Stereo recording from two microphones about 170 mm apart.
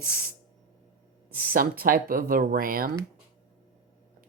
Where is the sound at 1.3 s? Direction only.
60° right (ahead or behind).